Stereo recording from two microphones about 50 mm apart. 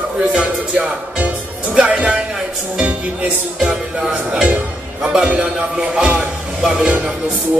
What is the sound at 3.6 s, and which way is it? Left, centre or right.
A man's voice, centre.